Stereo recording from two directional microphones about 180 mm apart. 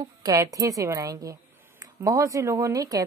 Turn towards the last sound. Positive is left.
turn(degrees=-20)  # may be behind; listen again after turning